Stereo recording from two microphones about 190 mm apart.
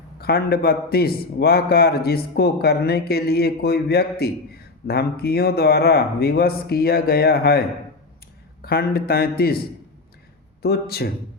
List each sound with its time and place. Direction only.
0.2 s a man's voice: 55° left (ahead or behind)
8.6 s a man's voice: 55° left (ahead or behind)